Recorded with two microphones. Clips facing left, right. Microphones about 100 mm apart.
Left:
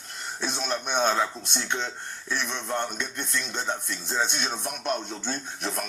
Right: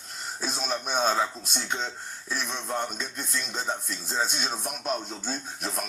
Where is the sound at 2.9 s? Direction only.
70° left (ahead or behind).